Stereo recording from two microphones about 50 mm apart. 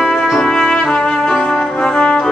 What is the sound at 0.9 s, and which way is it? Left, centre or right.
Brass instrument, centre.